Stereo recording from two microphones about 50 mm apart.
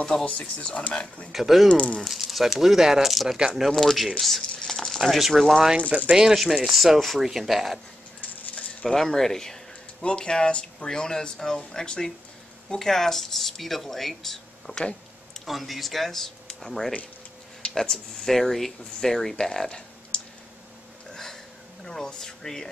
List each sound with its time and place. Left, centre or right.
0.2 s speech: left
1.3 s speech: centre
1.7 s speech: left
2.0 s speech: centre
3.7 s speech: centre
5.8 s speech: right
6.1 s speech: centre
8.8 s speech: centre
14.7 s speech: right
15.4 s speech: centre
21.1 s a sound: centre
21.8 s speech: centre